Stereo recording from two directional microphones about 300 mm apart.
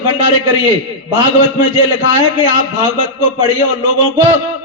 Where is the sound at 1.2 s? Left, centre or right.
Left.